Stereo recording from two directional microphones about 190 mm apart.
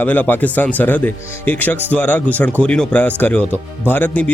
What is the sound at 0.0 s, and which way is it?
Speech, 10° left (ahead or behind).